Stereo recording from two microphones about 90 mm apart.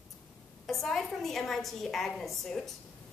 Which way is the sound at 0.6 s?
5° left (ahead or behind).